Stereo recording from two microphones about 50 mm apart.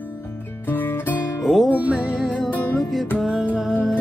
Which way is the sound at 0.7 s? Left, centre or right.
Left.